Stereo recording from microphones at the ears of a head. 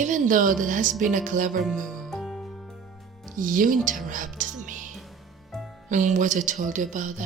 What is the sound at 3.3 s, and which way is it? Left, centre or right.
Speech, right.